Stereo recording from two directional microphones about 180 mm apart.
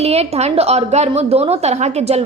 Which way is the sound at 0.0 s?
35° right (ahead or behind).